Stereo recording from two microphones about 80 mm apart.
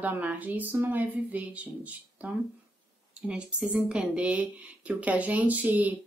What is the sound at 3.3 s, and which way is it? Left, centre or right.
A woman's voice, centre.